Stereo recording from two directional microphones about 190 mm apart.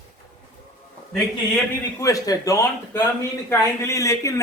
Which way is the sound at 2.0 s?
15° left (ahead or behind).